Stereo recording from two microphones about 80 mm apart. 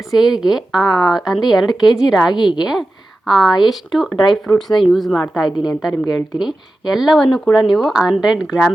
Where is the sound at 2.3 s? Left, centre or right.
Left.